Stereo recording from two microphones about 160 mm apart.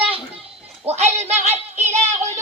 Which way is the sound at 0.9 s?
40° right (ahead or behind).